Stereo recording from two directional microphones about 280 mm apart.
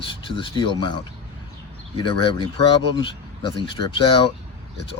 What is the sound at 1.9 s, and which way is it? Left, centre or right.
Speech, centre.